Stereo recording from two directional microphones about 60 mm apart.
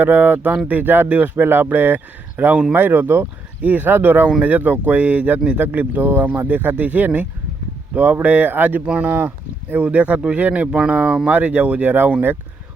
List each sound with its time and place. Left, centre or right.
0.0 s a man's voice: right
1.5 s a man's voice: right; by 11.3 s centre
11.3 s speech: right